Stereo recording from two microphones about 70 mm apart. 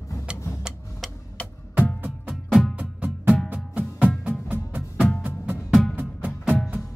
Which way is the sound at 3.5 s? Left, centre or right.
Centre.